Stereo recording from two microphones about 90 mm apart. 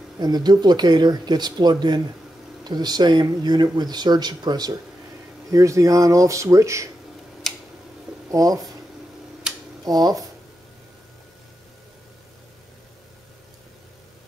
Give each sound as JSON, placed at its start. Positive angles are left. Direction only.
{"t": 0.2, "sound": "speech", "side_deg": -50}
{"t": 5.5, "sound": "speech", "side_deg": -35}
{"t": 7.5, "sound": "a sound", "side_deg": 5}
{"t": 8.3, "sound": "speech", "side_deg": -40}
{"t": 9.5, "sound": "a sound", "side_deg": -5}
{"t": 9.8, "sound": "speech", "side_deg": -45}